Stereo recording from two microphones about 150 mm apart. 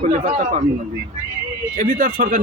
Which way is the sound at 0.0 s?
55° right (ahead or behind).